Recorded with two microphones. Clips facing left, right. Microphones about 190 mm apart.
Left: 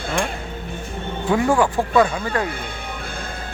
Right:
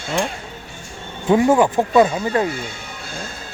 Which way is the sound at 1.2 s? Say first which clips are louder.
Right 4 dB; 20° right (ahead or behind).